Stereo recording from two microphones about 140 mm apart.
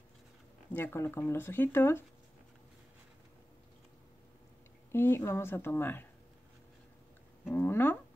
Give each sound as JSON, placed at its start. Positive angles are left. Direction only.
{"t": 0.7, "sound": "speech", "side_deg": 15}
{"t": 4.9, "sound": "speech", "side_deg": 15}
{"t": 7.4, "sound": "speech", "side_deg": 15}